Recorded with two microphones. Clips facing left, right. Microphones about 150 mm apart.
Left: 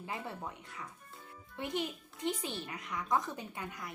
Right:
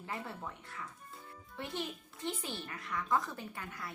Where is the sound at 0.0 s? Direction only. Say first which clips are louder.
Left 1 dB; 15° left (ahead or behind).